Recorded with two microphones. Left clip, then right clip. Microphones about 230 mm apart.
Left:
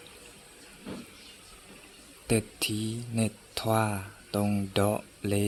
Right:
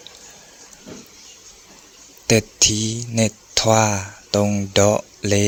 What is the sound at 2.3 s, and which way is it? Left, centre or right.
Speech, right.